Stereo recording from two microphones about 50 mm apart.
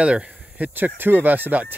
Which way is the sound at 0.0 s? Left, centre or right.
Right.